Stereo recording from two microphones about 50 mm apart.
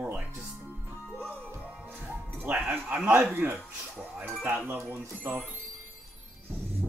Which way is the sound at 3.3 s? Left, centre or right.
Right.